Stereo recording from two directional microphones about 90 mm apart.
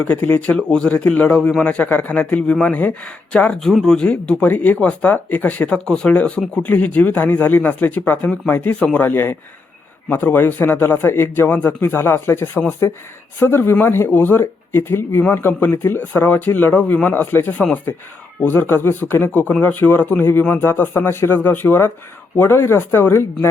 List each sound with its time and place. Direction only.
0.0 s speech: 20° left (ahead or behind)
0.5 s speech: 10° left (ahead or behind); by 23.5 s 25° left (ahead or behind)